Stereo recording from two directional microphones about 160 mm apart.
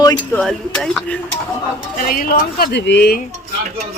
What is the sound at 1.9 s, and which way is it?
Speech, 65° left (ahead or behind).